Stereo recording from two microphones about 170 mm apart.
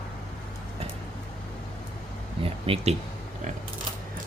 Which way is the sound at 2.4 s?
35° right (ahead or behind).